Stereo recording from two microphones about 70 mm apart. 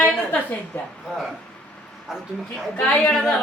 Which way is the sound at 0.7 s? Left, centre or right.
Left.